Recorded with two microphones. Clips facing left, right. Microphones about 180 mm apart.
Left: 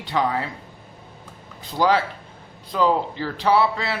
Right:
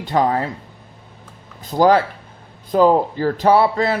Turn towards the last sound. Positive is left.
turn(degrees=-45)  # may be behind; listen again after turning